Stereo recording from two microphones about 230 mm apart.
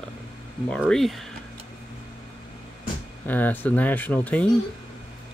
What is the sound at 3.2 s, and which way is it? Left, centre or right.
Speech, centre.